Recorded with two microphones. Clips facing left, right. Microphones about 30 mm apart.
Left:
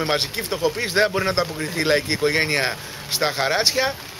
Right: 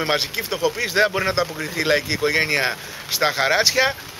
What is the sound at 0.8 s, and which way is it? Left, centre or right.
Speech, centre.